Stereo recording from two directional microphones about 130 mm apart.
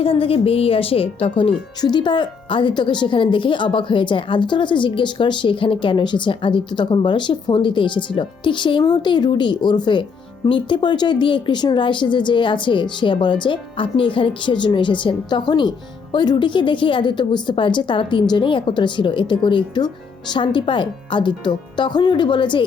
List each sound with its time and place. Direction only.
0.0 s a woman's voice: 45° left (ahead or behind)